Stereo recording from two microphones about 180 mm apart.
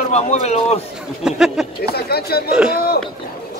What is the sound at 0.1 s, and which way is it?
Speech, 40° left (ahead or behind).